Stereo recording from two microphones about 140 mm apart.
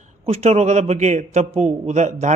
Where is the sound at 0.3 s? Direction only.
50° right (ahead or behind).